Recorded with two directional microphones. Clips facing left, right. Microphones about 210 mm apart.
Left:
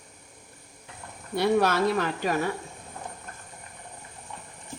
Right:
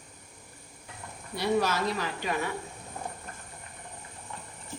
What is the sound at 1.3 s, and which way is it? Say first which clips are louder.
Speech: left 4 dB; 60° left (ahead or behind).